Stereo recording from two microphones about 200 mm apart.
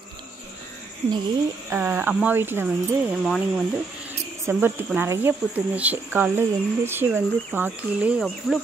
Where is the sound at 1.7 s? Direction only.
10° right (ahead or behind).